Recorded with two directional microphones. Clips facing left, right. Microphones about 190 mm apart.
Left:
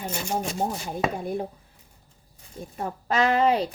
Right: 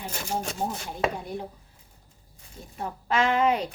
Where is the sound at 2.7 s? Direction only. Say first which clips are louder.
Left 1 dB; 40° left (ahead or behind).